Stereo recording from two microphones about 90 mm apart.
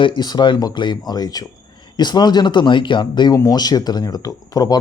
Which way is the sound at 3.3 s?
40° left (ahead or behind).